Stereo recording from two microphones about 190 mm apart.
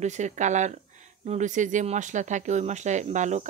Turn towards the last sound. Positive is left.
turn(degrees=-40)  # may be behind; listen again after turning